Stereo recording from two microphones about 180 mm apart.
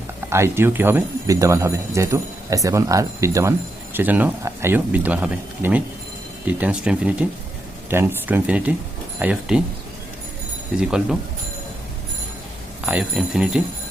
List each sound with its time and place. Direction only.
0.3 s speech: 15° right (ahead or behind)
10.8 s speech: 5° right (ahead or behind)
12.8 s speech: 5° right (ahead or behind)